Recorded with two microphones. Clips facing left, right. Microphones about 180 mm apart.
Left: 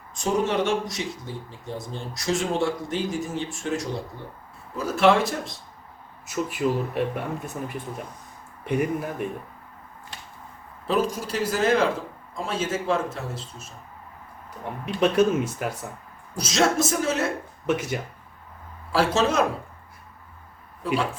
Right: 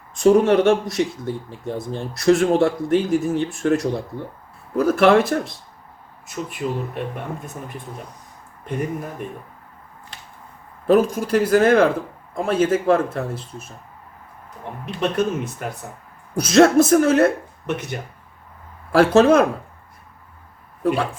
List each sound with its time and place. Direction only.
0.1 s speech: 60° right (ahead or behind)
6.2 s speech: 5° left (ahead or behind)
8.6 s speech: 10° left (ahead or behind)
10.8 s speech: 55° right (ahead or behind)
15.1 s speech: 5° left (ahead or behind)
16.3 s speech: 55° right (ahead or behind)
17.7 s speech: 5° left (ahead or behind)
18.9 s speech: 55° right (ahead or behind)
20.8 s speech: 55° right (ahead or behind)